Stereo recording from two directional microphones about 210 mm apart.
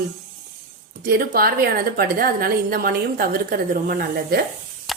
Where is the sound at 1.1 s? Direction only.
45° right (ahead or behind).